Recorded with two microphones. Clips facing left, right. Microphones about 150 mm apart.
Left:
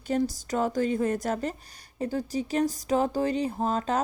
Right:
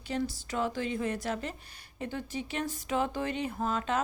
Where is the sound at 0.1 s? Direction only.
45° left (ahead or behind).